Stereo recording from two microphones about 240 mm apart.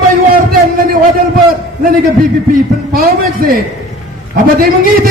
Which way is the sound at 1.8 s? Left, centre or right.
Right.